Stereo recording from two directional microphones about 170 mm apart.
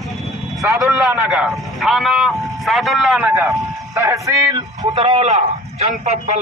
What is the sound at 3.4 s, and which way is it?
Speech, 20° right (ahead or behind).